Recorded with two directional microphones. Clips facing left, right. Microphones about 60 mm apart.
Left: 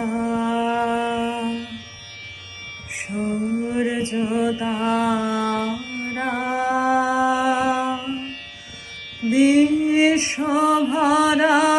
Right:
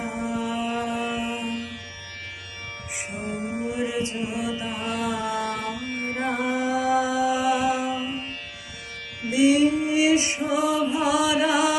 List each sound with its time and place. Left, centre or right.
0.0 s a sound: left
1.2 s music: right
3.1 s music: centre
3.7 s mantra: left
5.6 s carnatic music: right
6.1 s music: left
9.3 s music: left